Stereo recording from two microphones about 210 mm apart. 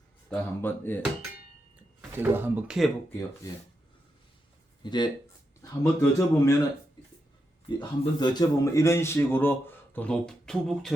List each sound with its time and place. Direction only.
0.3 s a man's voice: 10° left (ahead or behind)
2.0 s speech: 10° right (ahead or behind)
4.8 s a man's voice: 20° left (ahead or behind)
7.8 s a man's voice: 20° left (ahead or behind); by 10.9 s centre (ahead or behind)